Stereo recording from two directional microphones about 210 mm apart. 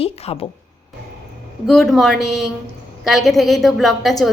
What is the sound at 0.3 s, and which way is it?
Speech, 25° left (ahead or behind).